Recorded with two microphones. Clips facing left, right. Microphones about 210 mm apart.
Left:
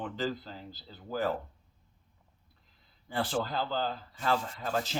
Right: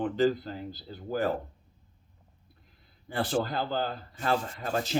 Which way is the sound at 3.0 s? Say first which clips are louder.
Right 3 dB; 55° right (ahead or behind).